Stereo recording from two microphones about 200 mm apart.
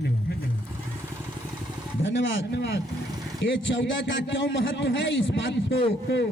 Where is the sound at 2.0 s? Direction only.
65° left (ahead or behind).